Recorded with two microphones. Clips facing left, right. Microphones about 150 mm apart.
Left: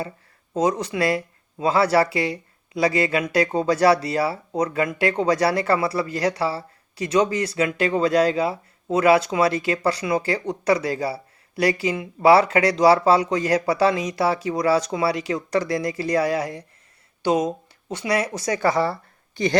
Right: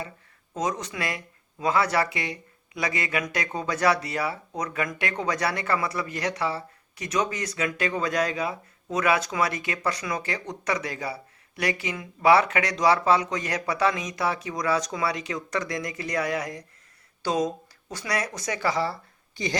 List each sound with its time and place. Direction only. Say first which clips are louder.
0.5 s speech: left 7 dB; 30° left (ahead or behind)
18.6 s speech: left 5 dB; 55° left (ahead or behind)